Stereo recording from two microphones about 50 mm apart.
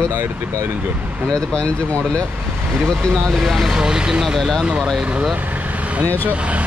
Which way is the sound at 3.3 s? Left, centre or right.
Centre.